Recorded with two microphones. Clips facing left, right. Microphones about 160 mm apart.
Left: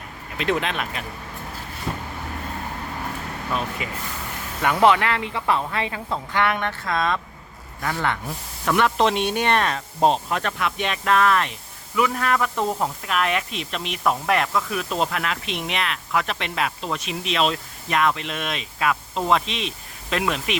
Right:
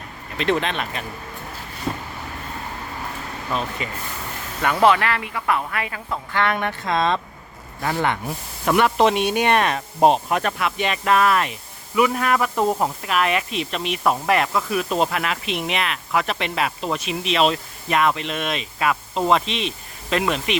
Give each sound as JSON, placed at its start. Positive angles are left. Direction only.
{"t": 0.3, "sound": "speech", "side_deg": 5}
{"t": 3.8, "sound": "speech", "side_deg": 5}
{"t": 4.6, "sound": "speech", "side_deg": 20}
{"t": 6.8, "sound": "speech", "side_deg": -25}
{"t": 8.7, "sound": "speech", "side_deg": -10}